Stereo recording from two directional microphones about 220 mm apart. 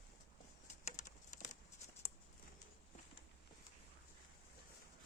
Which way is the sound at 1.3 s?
35° left (ahead or behind).